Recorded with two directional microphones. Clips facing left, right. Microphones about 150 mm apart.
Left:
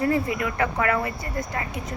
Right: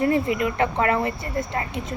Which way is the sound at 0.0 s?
20° right (ahead or behind).